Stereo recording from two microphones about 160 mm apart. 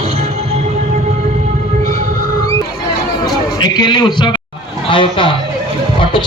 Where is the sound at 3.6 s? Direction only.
25° left (ahead or behind).